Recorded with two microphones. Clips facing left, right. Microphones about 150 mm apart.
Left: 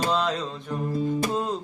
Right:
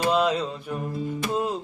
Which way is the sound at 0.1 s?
10° right (ahead or behind).